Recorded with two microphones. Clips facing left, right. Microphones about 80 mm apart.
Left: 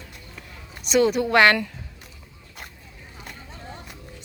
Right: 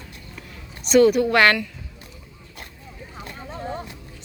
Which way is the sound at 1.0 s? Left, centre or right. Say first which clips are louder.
Right 1 dB; left.